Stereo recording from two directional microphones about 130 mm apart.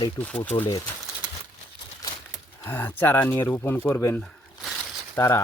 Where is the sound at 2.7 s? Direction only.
15° left (ahead or behind).